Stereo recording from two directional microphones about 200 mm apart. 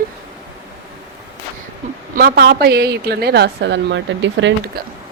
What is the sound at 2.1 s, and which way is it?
A woman's voice, 50° right (ahead or behind).